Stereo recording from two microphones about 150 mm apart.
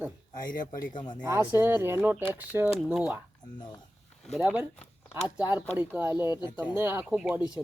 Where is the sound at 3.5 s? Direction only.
30° left (ahead or behind).